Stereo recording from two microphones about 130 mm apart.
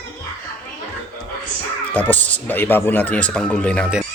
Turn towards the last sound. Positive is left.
turn(degrees=10)  # may be behind; listen again after turning